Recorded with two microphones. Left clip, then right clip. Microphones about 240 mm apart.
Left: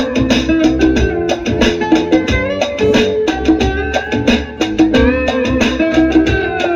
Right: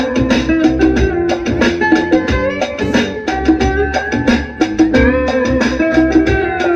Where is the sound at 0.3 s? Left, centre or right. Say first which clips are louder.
Left 1 dB; left.